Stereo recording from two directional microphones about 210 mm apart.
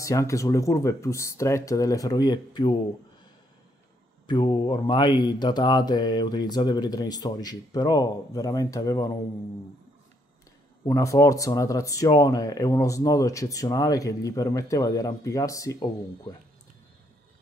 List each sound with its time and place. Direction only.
0.0 s speech: 15° left (ahead or behind)
4.3 s mantra: 20° left (ahead or behind)
10.9 s speech: 15° left (ahead or behind)